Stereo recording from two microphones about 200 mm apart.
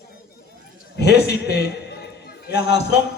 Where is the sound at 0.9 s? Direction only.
55° left (ahead or behind).